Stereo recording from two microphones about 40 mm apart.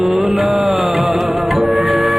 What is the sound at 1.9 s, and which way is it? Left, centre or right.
Music, centre.